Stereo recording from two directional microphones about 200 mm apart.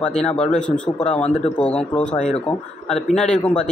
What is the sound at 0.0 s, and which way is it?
A man's voice, 5° left (ahead or behind).